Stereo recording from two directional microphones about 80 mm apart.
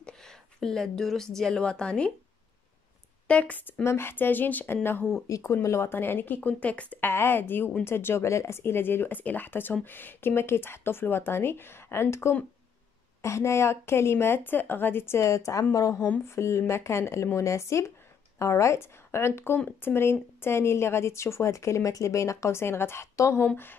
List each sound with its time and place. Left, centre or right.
0.0 s a woman's voice: centre
3.3 s speech: centre
3.8 s speech: left
5.3 s a woman's voice: left
23.4 s speech: left